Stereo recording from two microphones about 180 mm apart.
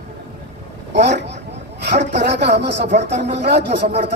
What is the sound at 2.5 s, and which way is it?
Speech, 70° right (ahead or behind).